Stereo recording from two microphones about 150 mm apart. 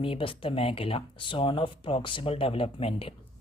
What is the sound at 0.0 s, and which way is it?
Speech, 35° left (ahead or behind).